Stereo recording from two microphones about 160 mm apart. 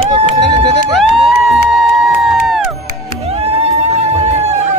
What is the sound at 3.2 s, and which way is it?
Music, 40° right (ahead or behind).